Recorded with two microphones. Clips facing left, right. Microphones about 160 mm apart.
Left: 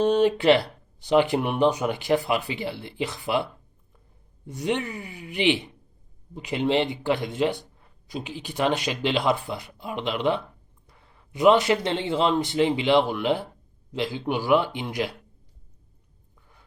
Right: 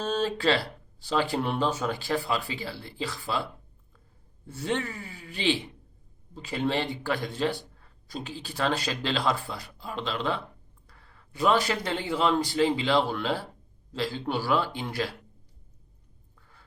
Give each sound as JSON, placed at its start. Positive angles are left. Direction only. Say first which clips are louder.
{"t": 0.0, "sound": "speech", "louder": "left 7 dB", "side_deg": 15}
{"t": 4.4, "sound": "speech", "louder": "left 3 dB", "side_deg": 20}